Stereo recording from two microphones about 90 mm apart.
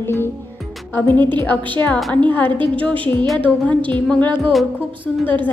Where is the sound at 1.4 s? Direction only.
20° left (ahead or behind).